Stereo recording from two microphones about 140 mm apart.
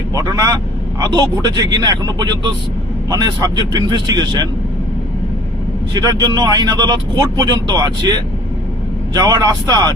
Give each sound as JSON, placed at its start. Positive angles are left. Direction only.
{"t": 0.1, "sound": "speech", "side_deg": -25}
{"t": 5.9, "sound": "speech", "side_deg": -25}